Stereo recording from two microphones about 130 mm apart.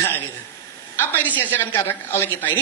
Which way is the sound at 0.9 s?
15° left (ahead or behind).